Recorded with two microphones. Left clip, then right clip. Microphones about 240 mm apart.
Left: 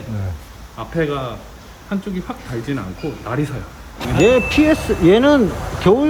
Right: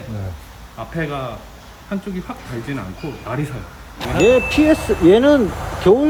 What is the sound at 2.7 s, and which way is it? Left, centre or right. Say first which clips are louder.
Speech: left 3 dB; centre.